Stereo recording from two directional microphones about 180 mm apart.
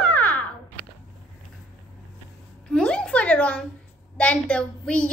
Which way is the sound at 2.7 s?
5° left (ahead or behind).